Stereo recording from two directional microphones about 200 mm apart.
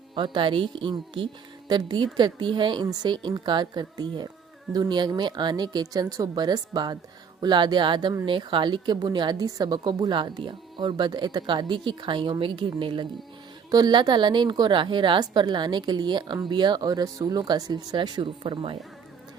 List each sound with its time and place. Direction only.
0.1 s speech: 25° right (ahead or behind)